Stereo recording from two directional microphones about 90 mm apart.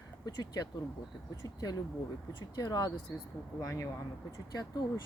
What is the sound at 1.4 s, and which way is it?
Speech, 45° left (ahead or behind).